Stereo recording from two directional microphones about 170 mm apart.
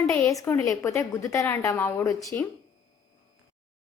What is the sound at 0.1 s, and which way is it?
A woman's voice, 15° left (ahead or behind).